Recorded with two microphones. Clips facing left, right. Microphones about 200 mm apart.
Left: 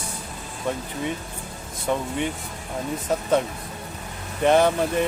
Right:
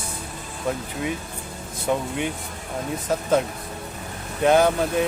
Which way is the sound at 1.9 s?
5° right (ahead or behind).